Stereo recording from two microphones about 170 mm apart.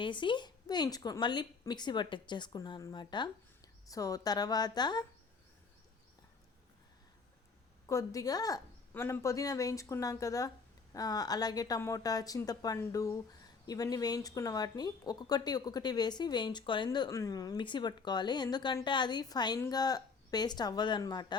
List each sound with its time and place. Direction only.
0.0 s speech: 30° left (ahead or behind)
7.9 s speech: 20° left (ahead or behind)